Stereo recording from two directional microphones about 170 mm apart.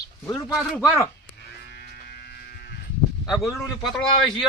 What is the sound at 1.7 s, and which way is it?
Electric shaver, 65° left (ahead or behind).